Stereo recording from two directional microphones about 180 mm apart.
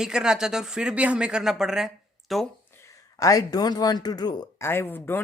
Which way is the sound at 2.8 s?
20° left (ahead or behind).